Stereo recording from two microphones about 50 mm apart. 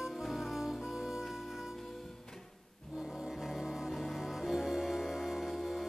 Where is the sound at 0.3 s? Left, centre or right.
Centre.